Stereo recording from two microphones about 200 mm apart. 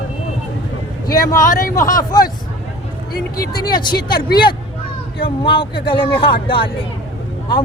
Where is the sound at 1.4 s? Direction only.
40° left (ahead or behind).